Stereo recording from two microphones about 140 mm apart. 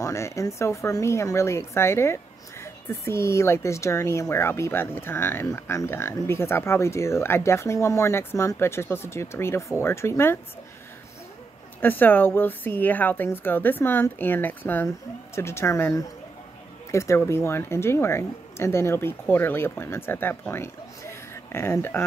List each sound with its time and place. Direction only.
0.0 s speech: 20° left (ahead or behind)
11.8 s speech: 15° left (ahead or behind)